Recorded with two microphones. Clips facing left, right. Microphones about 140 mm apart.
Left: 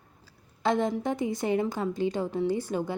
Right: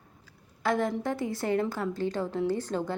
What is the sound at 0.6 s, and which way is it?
A woman's voice, 20° left (ahead or behind).